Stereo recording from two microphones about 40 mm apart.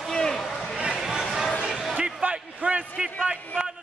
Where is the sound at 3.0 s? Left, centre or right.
Centre.